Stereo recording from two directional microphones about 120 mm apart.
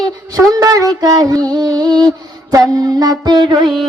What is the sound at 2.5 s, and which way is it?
Music, 30° right (ahead or behind).